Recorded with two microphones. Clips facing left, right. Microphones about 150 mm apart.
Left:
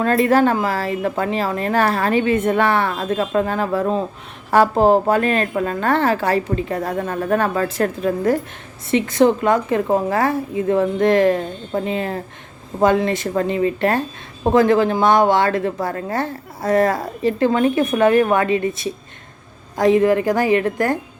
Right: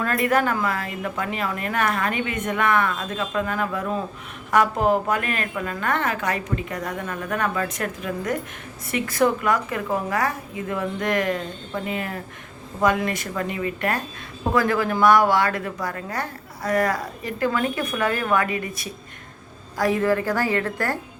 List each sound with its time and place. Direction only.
0.0 s a woman's voice: 30° left (ahead or behind)